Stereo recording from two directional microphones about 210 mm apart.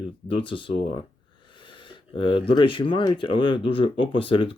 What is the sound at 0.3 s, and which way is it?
Speech, 25° left (ahead or behind).